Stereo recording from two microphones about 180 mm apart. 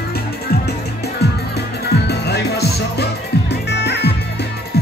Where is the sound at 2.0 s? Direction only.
65° left (ahead or behind).